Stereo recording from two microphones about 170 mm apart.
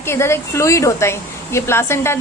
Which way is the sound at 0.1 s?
15° left (ahead or behind).